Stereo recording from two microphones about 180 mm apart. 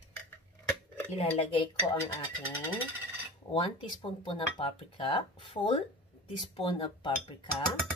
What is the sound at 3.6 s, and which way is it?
Speech, 30° left (ahead or behind).